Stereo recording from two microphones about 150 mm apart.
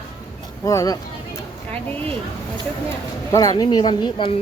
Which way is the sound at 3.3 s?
25° left (ahead or behind).